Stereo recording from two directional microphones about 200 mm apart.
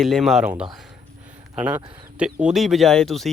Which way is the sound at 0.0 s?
Centre (ahead or behind).